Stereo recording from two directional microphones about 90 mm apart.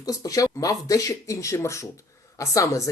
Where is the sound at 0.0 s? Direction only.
40° left (ahead or behind).